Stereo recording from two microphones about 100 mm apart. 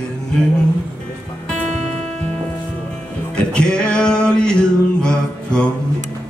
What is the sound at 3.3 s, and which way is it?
Music, 10° left (ahead or behind).